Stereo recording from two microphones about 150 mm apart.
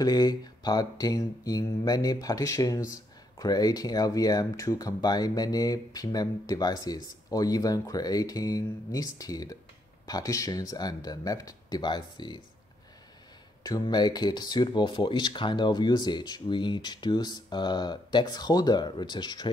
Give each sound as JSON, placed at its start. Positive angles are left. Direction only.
{"t": 0.0, "sound": "speech", "side_deg": 25}
{"t": 13.7, "sound": "speech", "side_deg": 25}